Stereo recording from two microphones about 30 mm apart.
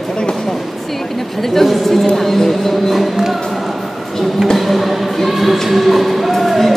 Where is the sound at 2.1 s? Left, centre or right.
Centre.